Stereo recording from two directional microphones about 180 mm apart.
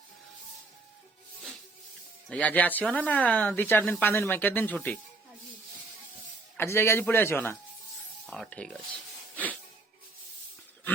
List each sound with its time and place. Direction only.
2.3 s speech: 10° left (ahead or behind)
6.6 s speech: 15° left (ahead or behind)